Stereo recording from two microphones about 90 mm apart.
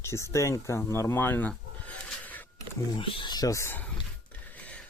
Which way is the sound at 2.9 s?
75° left (ahead or behind).